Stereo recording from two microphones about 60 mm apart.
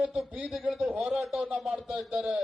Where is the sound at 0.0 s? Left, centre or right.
Centre.